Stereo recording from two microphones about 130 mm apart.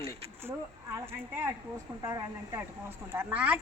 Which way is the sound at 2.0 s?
25° right (ahead or behind).